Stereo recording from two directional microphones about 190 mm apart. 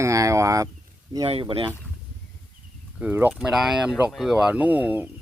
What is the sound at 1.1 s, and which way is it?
Speech, 25° right (ahead or behind).